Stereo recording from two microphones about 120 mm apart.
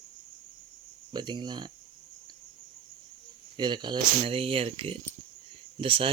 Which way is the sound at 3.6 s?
40° right (ahead or behind).